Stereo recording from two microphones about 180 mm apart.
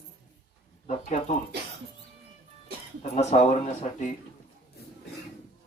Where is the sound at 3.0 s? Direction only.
40° left (ahead or behind).